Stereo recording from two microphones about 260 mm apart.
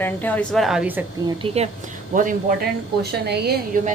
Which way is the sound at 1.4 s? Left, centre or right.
Right.